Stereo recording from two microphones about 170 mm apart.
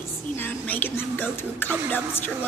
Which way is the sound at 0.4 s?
10° left (ahead or behind).